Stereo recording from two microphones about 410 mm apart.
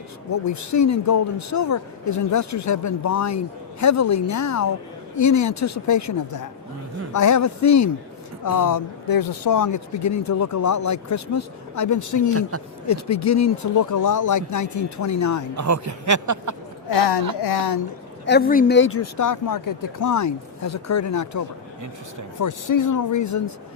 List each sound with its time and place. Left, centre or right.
0.3 s speech: left
15.5 s speech: right
16.9 s a woman's voice: left
18.3 s speech: left